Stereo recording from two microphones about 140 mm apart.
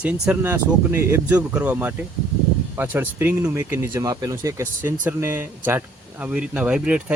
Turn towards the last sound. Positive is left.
turn(degrees=-5)  # may be behind; listen again after turning